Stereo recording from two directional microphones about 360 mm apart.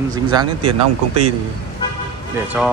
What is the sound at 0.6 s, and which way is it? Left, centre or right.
Speech, right.